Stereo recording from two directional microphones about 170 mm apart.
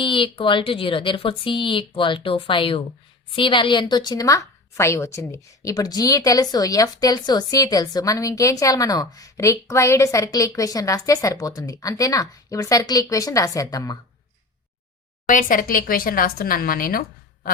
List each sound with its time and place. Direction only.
0.0 s a woman's voice: 30° left (ahead or behind)
15.3 s speech: 50° left (ahead or behind)